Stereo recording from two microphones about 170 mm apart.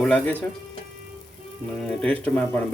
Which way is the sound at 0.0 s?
5° left (ahead or behind).